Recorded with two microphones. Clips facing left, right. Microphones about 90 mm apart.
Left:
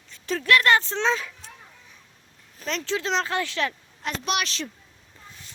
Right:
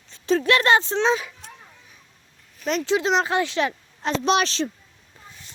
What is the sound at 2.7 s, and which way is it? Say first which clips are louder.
Speech: right 6 dB; 15° right (ahead or behind).